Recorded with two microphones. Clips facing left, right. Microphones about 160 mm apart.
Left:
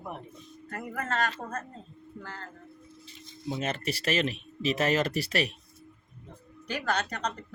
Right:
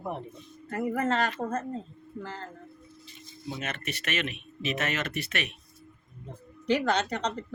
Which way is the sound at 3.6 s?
30° left (ahead or behind).